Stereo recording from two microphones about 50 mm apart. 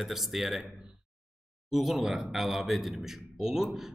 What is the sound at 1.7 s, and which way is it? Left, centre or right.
Speech, centre.